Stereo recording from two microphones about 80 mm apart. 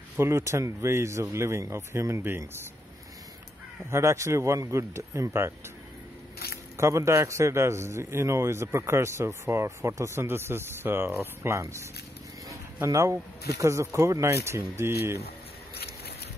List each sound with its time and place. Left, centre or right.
0.2 s a man's voice: right
3.9 s a man's voice: right
6.8 s a man's voice: right